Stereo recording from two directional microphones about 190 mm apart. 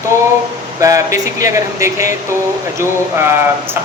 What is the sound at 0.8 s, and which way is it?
Speech, 15° right (ahead or behind).